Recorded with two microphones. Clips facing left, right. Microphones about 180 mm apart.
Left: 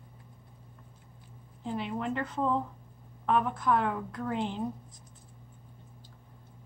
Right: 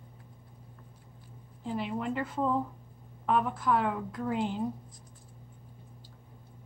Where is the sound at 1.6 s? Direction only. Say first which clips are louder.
Even; 5° right (ahead or behind).